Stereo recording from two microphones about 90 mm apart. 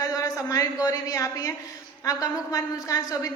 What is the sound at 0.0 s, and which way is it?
A woman's voice, 40° left (ahead or behind).